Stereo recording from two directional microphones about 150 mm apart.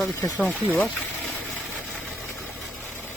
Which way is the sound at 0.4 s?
10° left (ahead or behind).